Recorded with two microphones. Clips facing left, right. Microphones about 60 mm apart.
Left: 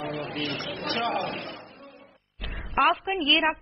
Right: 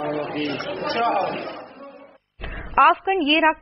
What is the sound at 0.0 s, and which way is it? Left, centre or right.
A man's voice, right.